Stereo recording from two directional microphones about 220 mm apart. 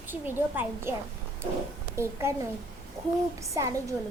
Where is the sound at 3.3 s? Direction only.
15° right (ahead or behind).